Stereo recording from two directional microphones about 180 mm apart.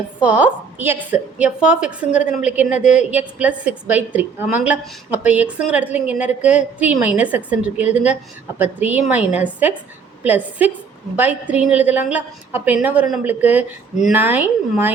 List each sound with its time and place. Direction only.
0.2 s a woman's voice: 10° right (ahead or behind)